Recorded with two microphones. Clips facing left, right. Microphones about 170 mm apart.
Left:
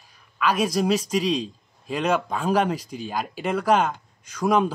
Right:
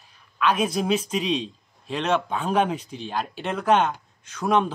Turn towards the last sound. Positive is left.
turn(degrees=5)  # may be behind; listen again after turning